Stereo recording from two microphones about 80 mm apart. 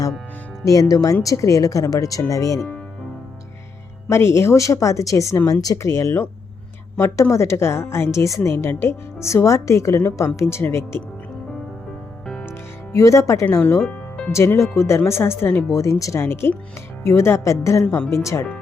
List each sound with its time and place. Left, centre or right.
0.6 s speech: left
4.1 s a woman's voice: left
12.2 s music: centre
12.5 s music: left
14.3 s a woman's voice: left
15.7 s a woman's voice: left
16.2 s a woman's voice: left